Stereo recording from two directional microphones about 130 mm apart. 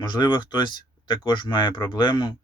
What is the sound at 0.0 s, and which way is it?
Speech, 35° left (ahead or behind).